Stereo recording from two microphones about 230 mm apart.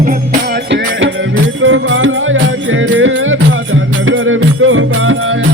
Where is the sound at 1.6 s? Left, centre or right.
Right.